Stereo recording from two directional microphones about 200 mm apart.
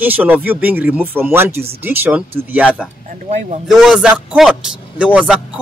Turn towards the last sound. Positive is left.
turn(degrees=-5)  # may be behind; listen again after turning